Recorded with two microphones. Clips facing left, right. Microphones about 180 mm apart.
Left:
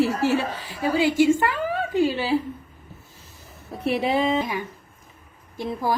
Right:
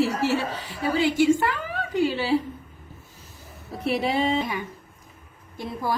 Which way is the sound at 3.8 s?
Centre (ahead or behind).